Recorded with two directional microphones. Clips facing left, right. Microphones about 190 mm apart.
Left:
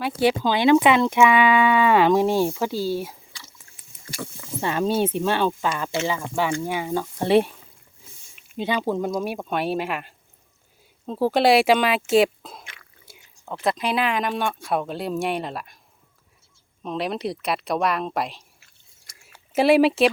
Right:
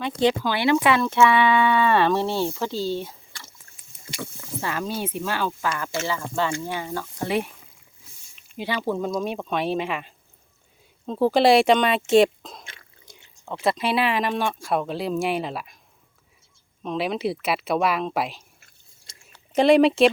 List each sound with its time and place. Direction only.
0.0 s speech: 10° left (ahead or behind)
4.6 s speech: 25° left (ahead or behind)
8.5 s speech: 20° left (ahead or behind)
12.6 s a sound: 30° right (ahead or behind)
13.1 s a sound: 5° left (ahead or behind)
13.7 s speech: centre (ahead or behind)
16.8 s speech: centre (ahead or behind)